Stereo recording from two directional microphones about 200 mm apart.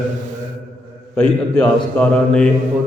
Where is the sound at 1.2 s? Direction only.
5° left (ahead or behind).